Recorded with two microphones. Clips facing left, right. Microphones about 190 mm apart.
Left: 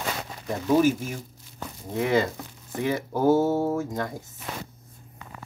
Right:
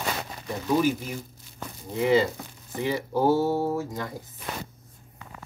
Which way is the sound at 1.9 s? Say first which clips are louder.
Right 2 dB; 55° left (ahead or behind).